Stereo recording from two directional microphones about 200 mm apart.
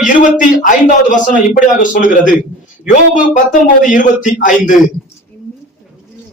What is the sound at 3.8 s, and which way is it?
Speech, 40° left (ahead or behind).